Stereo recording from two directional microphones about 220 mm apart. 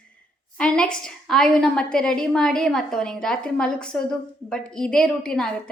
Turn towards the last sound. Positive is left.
turn(degrees=5)  # may be behind; listen again after turning